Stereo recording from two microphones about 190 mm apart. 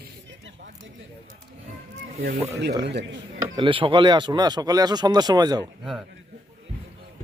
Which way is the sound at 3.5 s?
25° right (ahead or behind).